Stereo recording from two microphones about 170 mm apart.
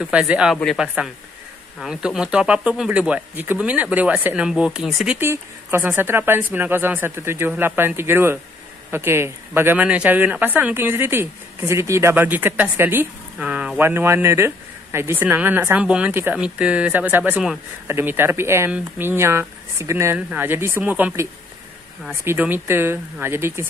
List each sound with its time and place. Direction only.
0.0 s speech: 5° right (ahead or behind)